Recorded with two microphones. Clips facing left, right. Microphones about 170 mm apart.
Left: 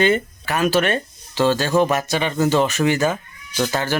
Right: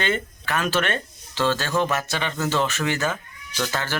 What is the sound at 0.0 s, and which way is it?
Speech, 10° left (ahead or behind).